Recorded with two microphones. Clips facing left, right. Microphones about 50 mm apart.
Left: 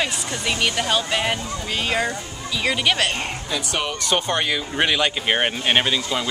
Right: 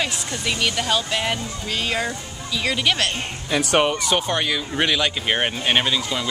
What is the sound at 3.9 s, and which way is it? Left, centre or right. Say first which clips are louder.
Speech: right 3 dB; centre.